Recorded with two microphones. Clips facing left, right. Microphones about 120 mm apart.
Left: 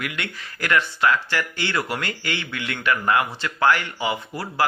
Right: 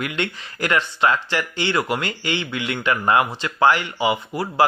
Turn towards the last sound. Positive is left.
turn(degrees=-15)  # may be behind; listen again after turning